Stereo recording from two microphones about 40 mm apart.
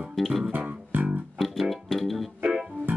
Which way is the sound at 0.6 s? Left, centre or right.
Right.